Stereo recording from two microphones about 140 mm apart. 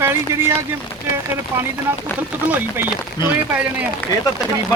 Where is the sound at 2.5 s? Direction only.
15° right (ahead or behind).